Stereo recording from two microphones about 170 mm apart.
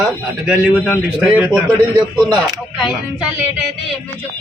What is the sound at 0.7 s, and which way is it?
Speech, 10° left (ahead or behind).